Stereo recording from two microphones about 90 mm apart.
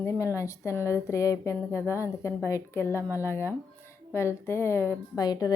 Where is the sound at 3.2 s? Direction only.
30° left (ahead or behind).